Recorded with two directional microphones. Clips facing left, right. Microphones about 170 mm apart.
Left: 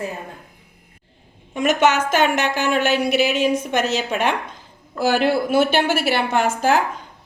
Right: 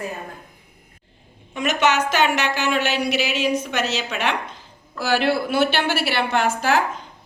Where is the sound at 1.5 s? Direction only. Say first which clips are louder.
Left 3 dB; 45° left (ahead or behind).